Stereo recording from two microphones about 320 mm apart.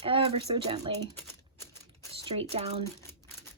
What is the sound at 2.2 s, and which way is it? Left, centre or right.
Speech, centre.